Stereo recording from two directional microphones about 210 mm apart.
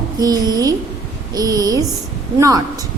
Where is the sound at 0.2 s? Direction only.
20° right (ahead or behind).